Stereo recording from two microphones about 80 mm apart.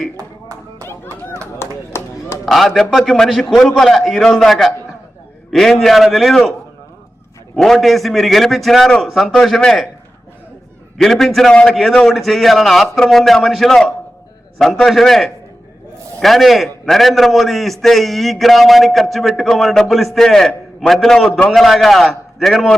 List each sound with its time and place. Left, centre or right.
1.1 s a sound: left
1.5 s run: left
2.5 s a man's voice: centre
7.5 s a man's voice: centre
10.9 s a man's voice: centre